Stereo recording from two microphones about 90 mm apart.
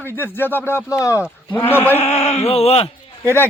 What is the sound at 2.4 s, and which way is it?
Speech, 90° left.